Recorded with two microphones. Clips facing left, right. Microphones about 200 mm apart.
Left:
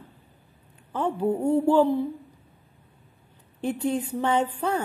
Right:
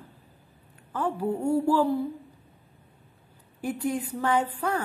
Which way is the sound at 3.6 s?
25° left (ahead or behind).